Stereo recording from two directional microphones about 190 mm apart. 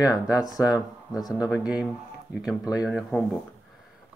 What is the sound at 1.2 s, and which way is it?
Speech, 20° left (ahead or behind).